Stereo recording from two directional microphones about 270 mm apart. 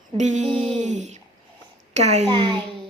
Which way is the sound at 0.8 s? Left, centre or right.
Right.